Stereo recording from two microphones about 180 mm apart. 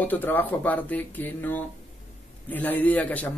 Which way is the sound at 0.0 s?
10° left (ahead or behind).